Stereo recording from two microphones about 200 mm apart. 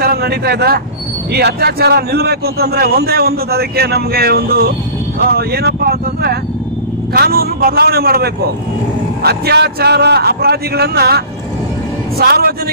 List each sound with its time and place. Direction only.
0.0 s a man's voice: 50° right (ahead or behind)